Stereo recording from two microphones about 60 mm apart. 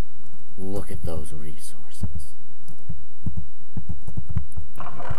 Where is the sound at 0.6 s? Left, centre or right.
Centre.